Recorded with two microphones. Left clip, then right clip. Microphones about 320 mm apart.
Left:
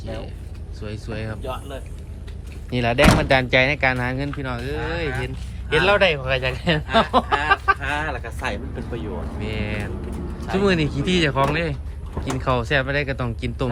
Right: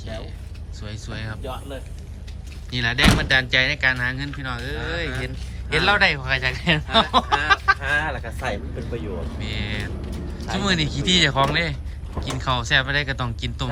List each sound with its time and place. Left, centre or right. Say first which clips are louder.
0.0 s a sound: left 2 dB; centre
0.8 s speech: left 3 dB; centre
2.6 s speech: left 2 dB; centre
6.9 s a sound: left 1 dB; centre
7.8 s honk: right 2 dB; left
9.4 s speech: left 2 dB; centre